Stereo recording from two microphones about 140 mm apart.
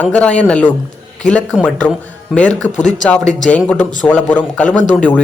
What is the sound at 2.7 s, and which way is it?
Speech, 60° left (ahead or behind).